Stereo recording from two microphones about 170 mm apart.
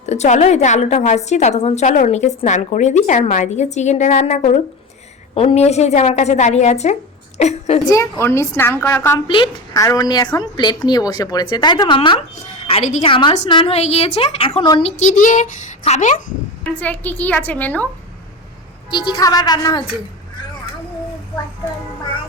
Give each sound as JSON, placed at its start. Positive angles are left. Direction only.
{"t": 0.0, "sound": "a woman's voice", "side_deg": 40}
{"t": 7.9, "sound": "a woman's voice", "side_deg": 20}
{"t": 9.1, "sound": "a woman's voice", "side_deg": 30}
{"t": 13.1, "sound": "a woman's voice", "side_deg": 30}
{"t": 16.8, "sound": "a woman's voice", "side_deg": 10}
{"t": 18.9, "sound": "a woman's voice", "side_deg": 25}